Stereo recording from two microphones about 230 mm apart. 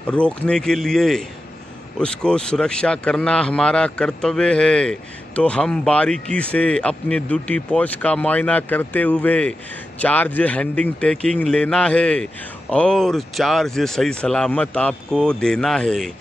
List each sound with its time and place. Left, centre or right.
0.1 s a man's voice: centre